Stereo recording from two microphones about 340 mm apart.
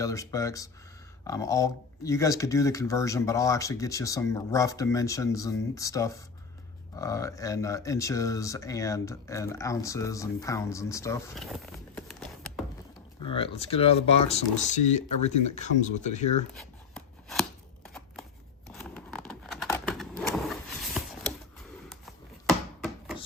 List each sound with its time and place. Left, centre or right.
0.0 s speech: centre
13.2 s speech: centre
16.6 s a sound: centre
17.8 s scissors: centre
18.7 s vehicle: centre